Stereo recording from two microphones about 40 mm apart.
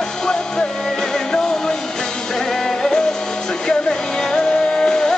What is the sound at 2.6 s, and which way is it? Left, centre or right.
Music, centre.